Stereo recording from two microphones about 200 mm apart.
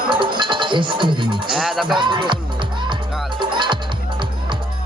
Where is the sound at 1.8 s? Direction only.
25° right (ahead or behind).